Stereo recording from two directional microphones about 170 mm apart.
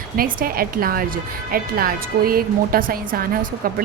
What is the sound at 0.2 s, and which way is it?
A woman's voice, 60° right (ahead or behind).